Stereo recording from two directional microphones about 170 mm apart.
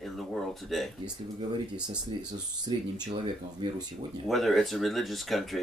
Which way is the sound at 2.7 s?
30° right (ahead or behind).